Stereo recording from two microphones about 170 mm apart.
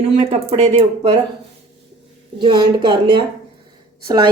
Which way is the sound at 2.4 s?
25° right (ahead or behind).